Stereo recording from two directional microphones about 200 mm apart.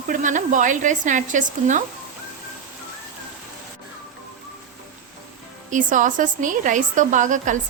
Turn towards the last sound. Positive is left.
turn(degrees=-40)  # may be behind; listen again after turning